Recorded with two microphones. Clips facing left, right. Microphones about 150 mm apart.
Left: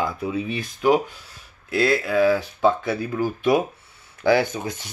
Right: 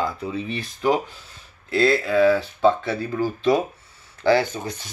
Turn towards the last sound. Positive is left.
turn(degrees=20)  # may be behind; listen again after turning